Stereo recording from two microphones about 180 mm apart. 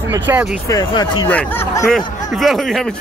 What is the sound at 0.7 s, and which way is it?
Speech, 25° left (ahead or behind).